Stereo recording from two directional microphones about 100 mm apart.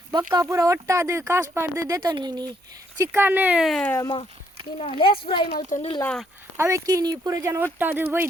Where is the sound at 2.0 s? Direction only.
45° right (ahead or behind).